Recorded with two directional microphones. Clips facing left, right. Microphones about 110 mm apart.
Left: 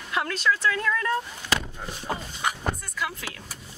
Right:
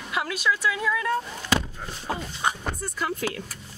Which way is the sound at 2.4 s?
25° right (ahead or behind).